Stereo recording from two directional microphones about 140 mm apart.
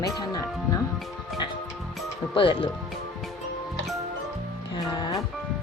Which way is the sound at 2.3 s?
35° left (ahead or behind).